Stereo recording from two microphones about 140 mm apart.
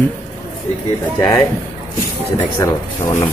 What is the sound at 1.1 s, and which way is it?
A man's voice, 15° left (ahead or behind).